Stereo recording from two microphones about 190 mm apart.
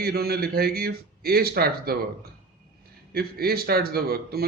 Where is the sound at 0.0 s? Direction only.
55° right (ahead or behind).